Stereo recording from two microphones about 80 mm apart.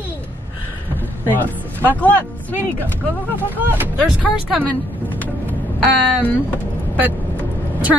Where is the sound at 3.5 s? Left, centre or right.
Right.